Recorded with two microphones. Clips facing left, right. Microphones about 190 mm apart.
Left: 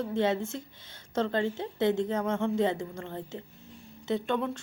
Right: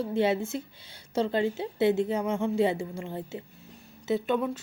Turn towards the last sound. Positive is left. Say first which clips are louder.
# right 2 dB
turn(degrees=-5)  # may be behind; listen again after turning